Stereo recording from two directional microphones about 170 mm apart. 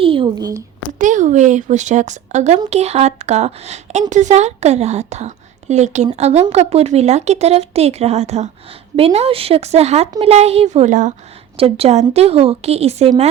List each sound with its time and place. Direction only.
0.0 s speech: 30° right (ahead or behind)
0.9 s speech: 50° right (ahead or behind)
11.5 s speech: 35° right (ahead or behind)